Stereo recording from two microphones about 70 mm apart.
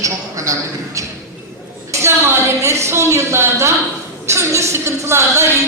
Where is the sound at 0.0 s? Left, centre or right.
Right.